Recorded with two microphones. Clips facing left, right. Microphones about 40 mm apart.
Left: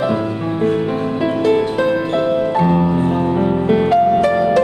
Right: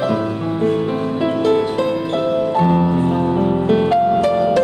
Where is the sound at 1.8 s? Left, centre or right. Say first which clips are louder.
Left 2 dB; centre.